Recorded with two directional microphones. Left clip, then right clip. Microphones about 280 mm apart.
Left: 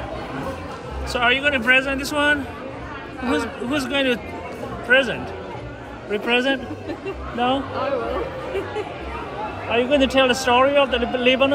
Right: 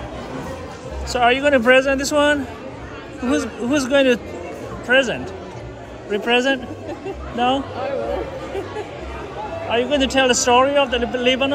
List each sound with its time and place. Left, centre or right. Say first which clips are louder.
1.1 s a man's voice: right 3 dB; centre
9.7 s a man's voice: even; centre